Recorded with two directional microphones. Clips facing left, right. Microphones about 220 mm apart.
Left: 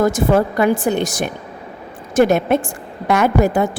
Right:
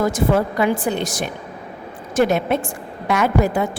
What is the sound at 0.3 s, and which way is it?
A woman's voice, 50° left (ahead or behind).